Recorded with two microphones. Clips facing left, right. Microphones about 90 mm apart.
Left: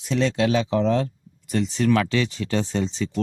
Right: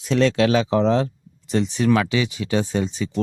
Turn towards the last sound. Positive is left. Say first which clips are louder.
# right 2 dB
turn(degrees=-10)  # may be behind; listen again after turning